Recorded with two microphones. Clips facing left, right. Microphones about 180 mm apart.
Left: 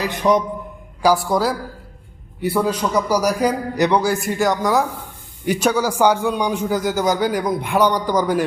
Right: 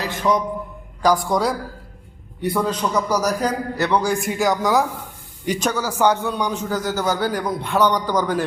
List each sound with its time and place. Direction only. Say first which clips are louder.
0.0 s a man's voice: left 3 dB; 20° left (ahead or behind)
1.0 s a man's voice: left 1 dB; 5° left (ahead or behind)